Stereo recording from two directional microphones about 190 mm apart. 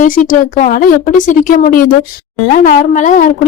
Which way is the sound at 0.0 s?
45° left (ahead or behind).